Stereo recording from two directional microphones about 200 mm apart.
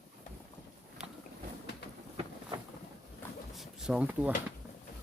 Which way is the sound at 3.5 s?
5° right (ahead or behind).